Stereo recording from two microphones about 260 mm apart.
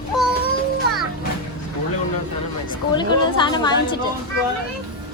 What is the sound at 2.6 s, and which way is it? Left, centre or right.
A woman's voice, centre.